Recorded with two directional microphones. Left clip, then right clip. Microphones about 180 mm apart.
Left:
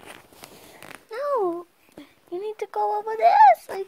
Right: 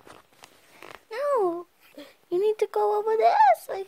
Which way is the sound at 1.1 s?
15° right (ahead or behind).